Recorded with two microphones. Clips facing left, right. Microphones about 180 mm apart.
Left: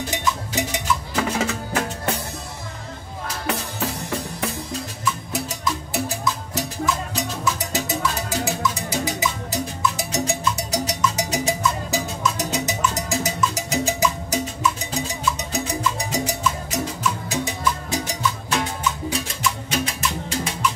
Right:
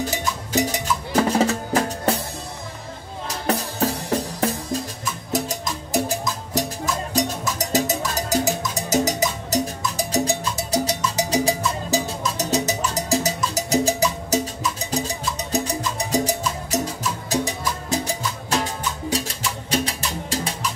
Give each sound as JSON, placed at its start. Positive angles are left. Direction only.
{"t": 0.2, "sound": "percussion", "side_deg": -40}
{"t": 3.4, "sound": "music", "side_deg": -40}
{"t": 18.2, "sound": "music", "side_deg": -35}